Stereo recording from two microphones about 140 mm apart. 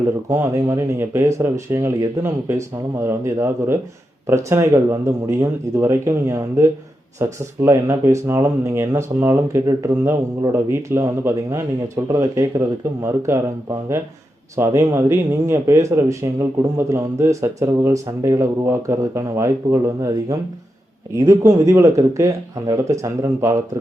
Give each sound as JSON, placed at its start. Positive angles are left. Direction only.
{"t": 0.3, "sound": "speech", "side_deg": -20}
{"t": 14.5, "sound": "speech", "side_deg": -20}